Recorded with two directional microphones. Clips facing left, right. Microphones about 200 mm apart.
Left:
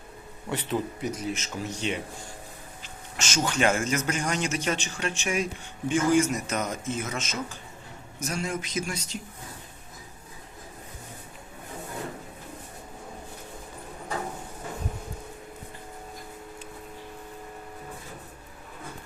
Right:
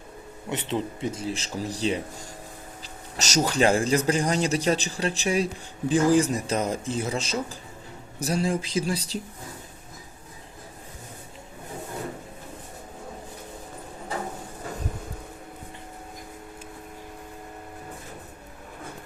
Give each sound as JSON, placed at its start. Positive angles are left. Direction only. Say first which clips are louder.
{"t": 0.5, "sound": "speech", "louder": "right 1 dB", "side_deg": -25}